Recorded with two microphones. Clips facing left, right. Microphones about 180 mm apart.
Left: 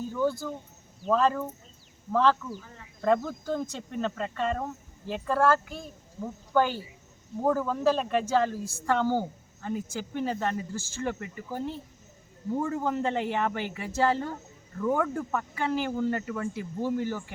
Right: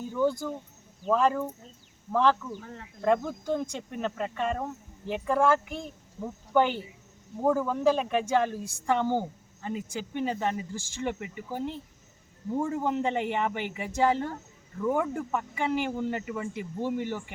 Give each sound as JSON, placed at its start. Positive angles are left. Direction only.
{"t": 0.0, "sound": "a sound", "side_deg": -15}
{"t": 1.0, "sound": "speech", "side_deg": -10}
{"t": 2.6, "sound": "speech", "side_deg": -60}
{"t": 3.0, "sound": "speech", "side_deg": -15}